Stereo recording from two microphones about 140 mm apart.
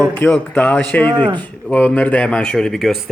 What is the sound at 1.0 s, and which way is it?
Speech, 35° right (ahead or behind).